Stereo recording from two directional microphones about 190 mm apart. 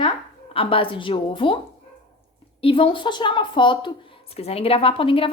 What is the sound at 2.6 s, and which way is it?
A woman's voice, 30° left (ahead or behind).